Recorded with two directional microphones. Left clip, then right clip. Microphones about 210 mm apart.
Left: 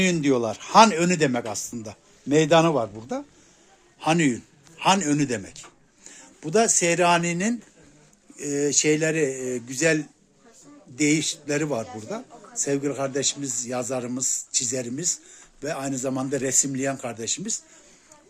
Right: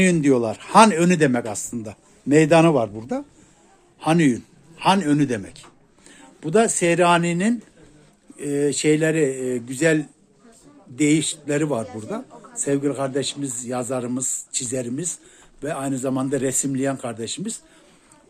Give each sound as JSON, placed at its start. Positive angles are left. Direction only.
{"t": 0.0, "sound": "a man's voice", "side_deg": 0}